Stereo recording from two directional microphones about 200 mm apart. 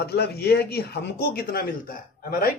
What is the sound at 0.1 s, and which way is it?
Speech, 55° left (ahead or behind).